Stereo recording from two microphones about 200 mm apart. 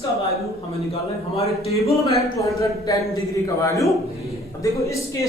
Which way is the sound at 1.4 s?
30° left (ahead or behind).